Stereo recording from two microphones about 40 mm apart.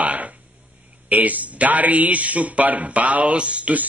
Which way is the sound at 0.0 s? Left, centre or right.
Right.